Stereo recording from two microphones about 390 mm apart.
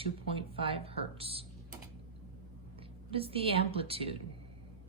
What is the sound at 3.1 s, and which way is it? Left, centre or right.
A woman's voice, centre.